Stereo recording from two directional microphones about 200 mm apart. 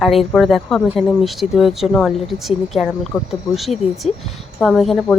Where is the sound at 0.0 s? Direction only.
Centre (ahead or behind).